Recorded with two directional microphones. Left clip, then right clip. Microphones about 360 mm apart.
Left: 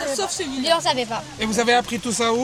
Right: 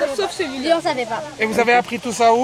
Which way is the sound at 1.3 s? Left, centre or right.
Centre.